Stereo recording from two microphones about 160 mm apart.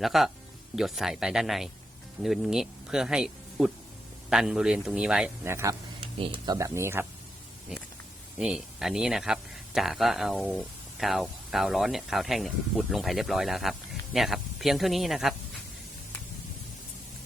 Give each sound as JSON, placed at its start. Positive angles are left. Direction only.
{"t": 0.0, "sound": "speech", "side_deg": 0}
{"t": 5.4, "sound": "speech", "side_deg": -15}
{"t": 6.1, "sound": "speech", "side_deg": -35}
{"t": 8.4, "sound": "speech", "side_deg": -5}